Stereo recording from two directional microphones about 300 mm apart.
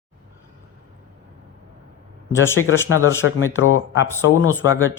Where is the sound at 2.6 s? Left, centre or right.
Left.